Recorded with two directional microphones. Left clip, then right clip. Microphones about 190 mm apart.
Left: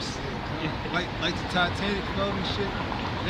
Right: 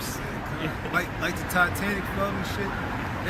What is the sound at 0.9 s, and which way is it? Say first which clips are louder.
Speech: right 2 dB; 5° right (ahead or behind).